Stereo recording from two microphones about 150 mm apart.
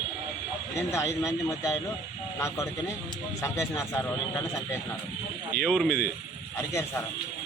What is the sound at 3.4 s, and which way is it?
Speech, 20° left (ahead or behind).